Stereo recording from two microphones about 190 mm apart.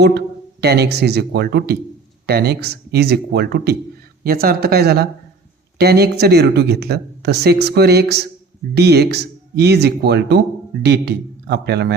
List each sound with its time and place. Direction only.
0.6 s speech: 60° right (ahead or behind)